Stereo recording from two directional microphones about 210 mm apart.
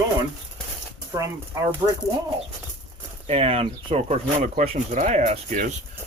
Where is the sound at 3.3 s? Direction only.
25° right (ahead or behind).